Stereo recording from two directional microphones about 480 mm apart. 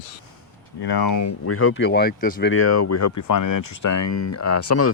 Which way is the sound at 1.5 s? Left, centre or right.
Left.